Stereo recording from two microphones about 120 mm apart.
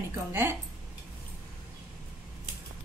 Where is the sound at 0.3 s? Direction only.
20° right (ahead or behind).